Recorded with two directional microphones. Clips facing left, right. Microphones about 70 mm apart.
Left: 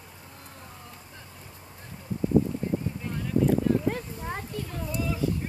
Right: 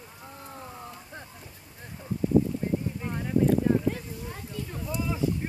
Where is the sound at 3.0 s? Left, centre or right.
Right.